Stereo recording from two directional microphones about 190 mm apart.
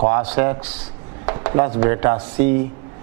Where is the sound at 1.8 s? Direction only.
15° right (ahead or behind).